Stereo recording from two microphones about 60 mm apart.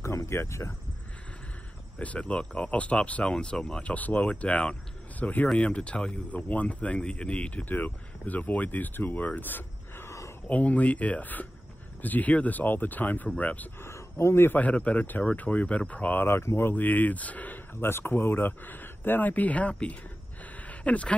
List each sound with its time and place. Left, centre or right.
0.3 s speech: left
2.0 s speech: left
3.8 s speech: left
7.6 s speech: left
10.0 s a sound: left
10.5 s speech: left
13.7 s speech: left
14.6 s speech: left
16.3 s speech: left
20.5 s a sound: left